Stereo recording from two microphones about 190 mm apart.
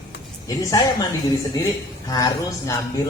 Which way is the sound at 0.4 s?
20° left (ahead or behind).